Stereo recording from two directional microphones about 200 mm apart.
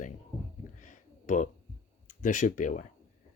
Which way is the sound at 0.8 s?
40° left (ahead or behind).